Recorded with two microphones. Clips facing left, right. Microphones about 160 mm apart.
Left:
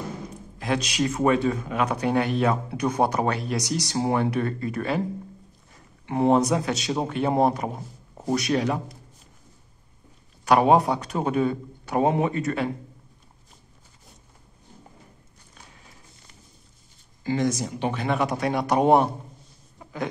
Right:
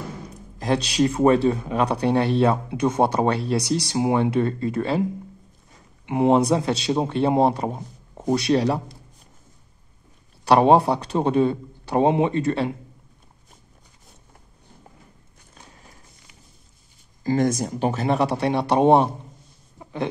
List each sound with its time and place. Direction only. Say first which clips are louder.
0.6 s a man's voice: right 4 dB; 35° right (ahead or behind)
6.0 s a man's voice: right 2 dB; 20° right (ahead or behind); by 8.9 s 35° right (ahead or behind)
10.4 s a man's voice: right 3 dB; 30° right (ahead or behind)
17.2 s speech: right 3 dB; 45° right (ahead or behind); by 19.0 s 25° right (ahead or behind)
19.8 s a sound: right 3 dB; 25° right (ahead or behind)